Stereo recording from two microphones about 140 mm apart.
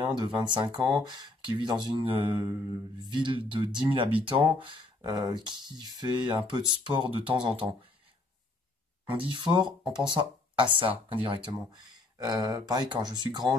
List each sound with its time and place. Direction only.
0.0 s speech: 30° right (ahead or behind)
9.1 s speech: 35° right (ahead or behind)